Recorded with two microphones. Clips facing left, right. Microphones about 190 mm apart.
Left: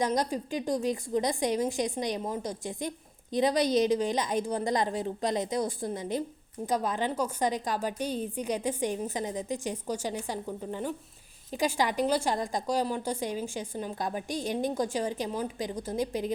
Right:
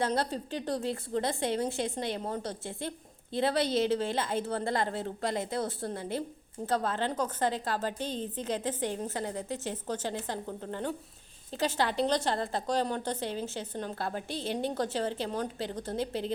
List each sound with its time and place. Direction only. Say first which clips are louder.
0.0 s a woman's voice: left 2 dB; 15° left (ahead or behind)